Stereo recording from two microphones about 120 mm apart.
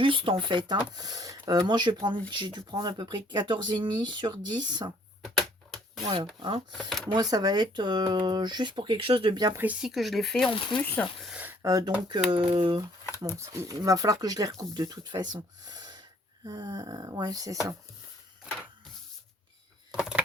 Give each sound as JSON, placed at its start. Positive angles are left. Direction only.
{"t": 0.0, "sound": "speech", "side_deg": -45}
{"t": 5.2, "sound": "a sound", "side_deg": 0}
{"t": 6.4, "sound": "speech", "side_deg": -45}
{"t": 9.8, "sound": "speech", "side_deg": 0}
{"t": 10.8, "sound": "speech", "side_deg": 15}
{"t": 11.3, "sound": "a sound", "side_deg": -10}
{"t": 11.6, "sound": "speech", "side_deg": -30}
{"t": 12.3, "sound": "speech", "side_deg": -45}
{"t": 13.1, "sound": "speech", "side_deg": -25}
{"t": 20.0, "sound": "a sound", "side_deg": -10}